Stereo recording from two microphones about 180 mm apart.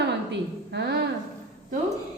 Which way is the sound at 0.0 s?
70° right (ahead or behind).